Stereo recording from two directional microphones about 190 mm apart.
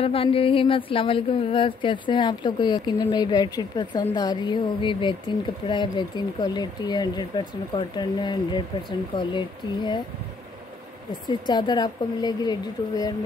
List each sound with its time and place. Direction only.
0.0 s speech: 30° left (ahead or behind)
11.2 s speech: 20° left (ahead or behind)